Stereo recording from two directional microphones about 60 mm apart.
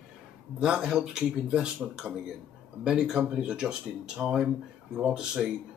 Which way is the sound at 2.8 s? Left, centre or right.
Centre.